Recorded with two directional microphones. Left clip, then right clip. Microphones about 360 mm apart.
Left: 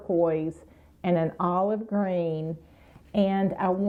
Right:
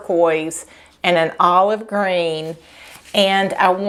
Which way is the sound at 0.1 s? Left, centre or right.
Centre.